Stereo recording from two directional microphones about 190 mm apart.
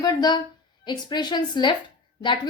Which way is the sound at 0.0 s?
20° left (ahead or behind).